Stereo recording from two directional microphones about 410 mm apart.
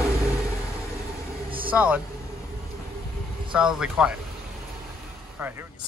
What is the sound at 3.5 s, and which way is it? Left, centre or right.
Speech, centre.